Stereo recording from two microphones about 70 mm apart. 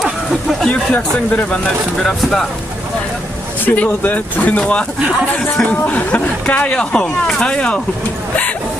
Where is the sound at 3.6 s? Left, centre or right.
Left.